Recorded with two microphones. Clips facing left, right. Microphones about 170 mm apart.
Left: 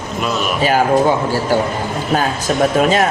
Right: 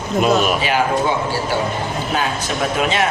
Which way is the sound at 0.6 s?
40° left (ahead or behind).